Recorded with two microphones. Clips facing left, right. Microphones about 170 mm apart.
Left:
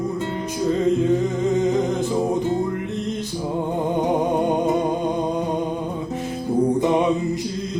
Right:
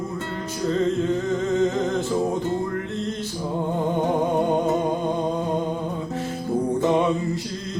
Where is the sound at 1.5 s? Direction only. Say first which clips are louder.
Left 1 dB; 15° left (ahead or behind).